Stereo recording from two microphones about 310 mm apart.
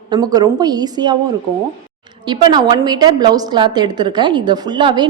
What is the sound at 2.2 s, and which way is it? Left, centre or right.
A woman's voice, centre.